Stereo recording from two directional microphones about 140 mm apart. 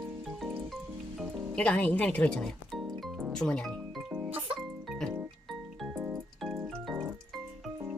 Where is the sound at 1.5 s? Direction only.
10° left (ahead or behind).